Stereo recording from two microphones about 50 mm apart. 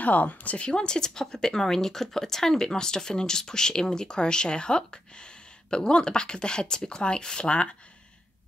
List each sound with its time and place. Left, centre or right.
0.0 s speech: left